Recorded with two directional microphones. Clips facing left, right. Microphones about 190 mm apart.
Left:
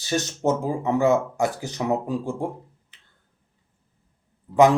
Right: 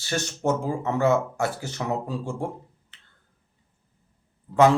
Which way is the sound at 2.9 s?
15° left (ahead or behind).